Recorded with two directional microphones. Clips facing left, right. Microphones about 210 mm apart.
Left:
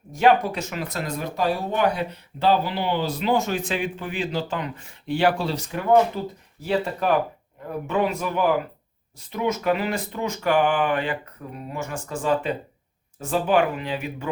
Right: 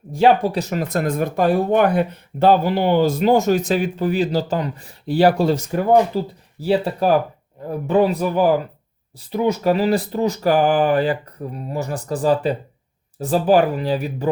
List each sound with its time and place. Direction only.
0.1 s speech: 30° right (ahead or behind)